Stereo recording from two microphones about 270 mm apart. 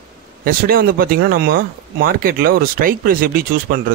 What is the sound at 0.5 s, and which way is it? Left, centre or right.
Speech, right.